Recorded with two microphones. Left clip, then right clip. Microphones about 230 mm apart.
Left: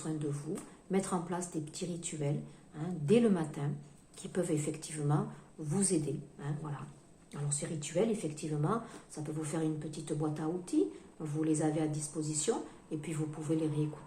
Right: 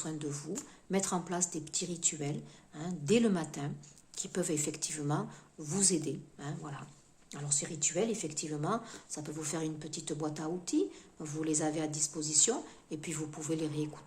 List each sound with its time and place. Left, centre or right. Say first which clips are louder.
0.0 s speech: left 1 dB; right